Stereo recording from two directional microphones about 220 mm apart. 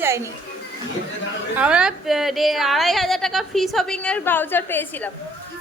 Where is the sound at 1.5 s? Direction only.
5° right (ahead or behind).